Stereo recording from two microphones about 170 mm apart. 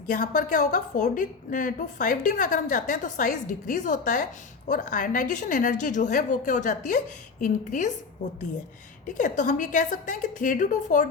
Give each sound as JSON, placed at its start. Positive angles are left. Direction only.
{"t": 0.1, "sound": "a woman's voice", "side_deg": 50}
{"t": 9.1, "sound": "a woman's voice", "side_deg": 50}